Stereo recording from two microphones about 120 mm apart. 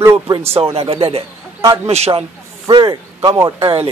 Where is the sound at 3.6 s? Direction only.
50° right (ahead or behind).